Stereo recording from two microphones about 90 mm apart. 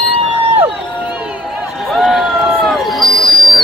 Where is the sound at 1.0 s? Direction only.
10° right (ahead or behind).